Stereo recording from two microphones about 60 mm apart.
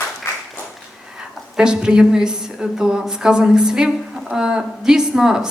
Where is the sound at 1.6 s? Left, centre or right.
Centre.